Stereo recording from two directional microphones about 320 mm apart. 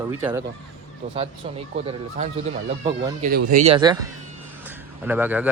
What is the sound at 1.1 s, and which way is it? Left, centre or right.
Speech, centre.